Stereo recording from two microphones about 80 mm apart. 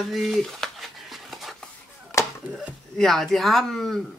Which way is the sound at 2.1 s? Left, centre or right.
Left.